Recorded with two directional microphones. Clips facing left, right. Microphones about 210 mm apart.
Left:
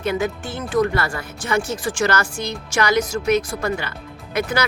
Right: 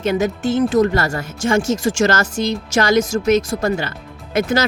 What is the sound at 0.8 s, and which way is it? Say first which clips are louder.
Speech: right 4 dB; 40° right (ahead or behind).